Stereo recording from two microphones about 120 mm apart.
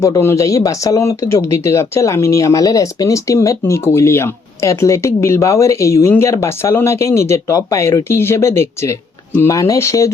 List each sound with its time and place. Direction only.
0.0 s speech: 25° left (ahead or behind)